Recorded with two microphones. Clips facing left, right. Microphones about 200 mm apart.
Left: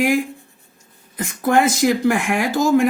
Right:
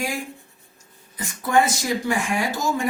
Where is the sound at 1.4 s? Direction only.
60° left (ahead or behind).